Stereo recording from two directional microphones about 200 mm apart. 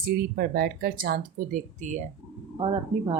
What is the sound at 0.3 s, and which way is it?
Speech, 50° right (ahead or behind).